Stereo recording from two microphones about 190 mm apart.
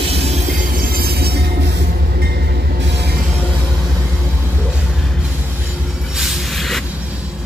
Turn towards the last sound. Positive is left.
turn(degrees=0)  # may be behind; listen again after turning